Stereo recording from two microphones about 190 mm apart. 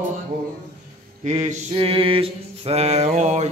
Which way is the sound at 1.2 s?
35° right (ahead or behind).